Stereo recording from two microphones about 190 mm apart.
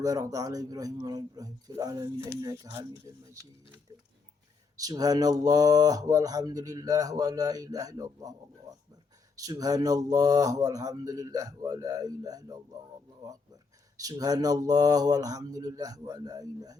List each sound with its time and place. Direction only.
0.0 s speech: 20° right (ahead or behind)
4.8 s speech: 20° right (ahead or behind)
13.9 s speech: 20° right (ahead or behind)